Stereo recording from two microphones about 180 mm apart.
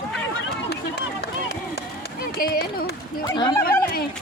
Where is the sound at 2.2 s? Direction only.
55° left (ahead or behind).